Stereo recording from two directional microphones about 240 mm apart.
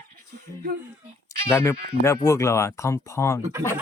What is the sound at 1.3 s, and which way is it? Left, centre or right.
Speech, centre.